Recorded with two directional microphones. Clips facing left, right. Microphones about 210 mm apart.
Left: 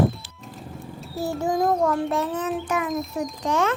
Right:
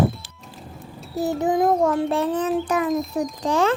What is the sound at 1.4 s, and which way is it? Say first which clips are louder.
Child singing: right 2 dB; 20° right (ahead or behind).